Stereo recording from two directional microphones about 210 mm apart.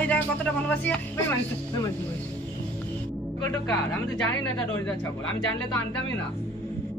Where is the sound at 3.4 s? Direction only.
10° left (ahead or behind).